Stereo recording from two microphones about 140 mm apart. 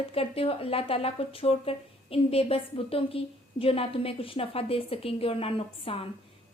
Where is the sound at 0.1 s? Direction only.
45° left (ahead or behind).